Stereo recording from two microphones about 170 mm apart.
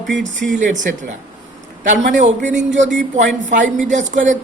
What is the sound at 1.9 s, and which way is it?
Speech, 45° right (ahead or behind).